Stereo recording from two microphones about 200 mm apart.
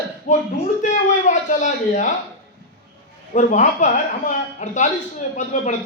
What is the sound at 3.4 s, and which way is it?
A man's voice, 35° left (ahead or behind).